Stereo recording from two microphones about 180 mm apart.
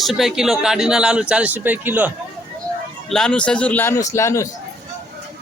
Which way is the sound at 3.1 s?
5° left (ahead or behind).